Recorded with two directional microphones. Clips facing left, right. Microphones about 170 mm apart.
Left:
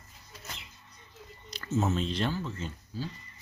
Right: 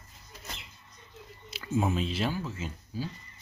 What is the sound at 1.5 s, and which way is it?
Speech, 10° right (ahead or behind).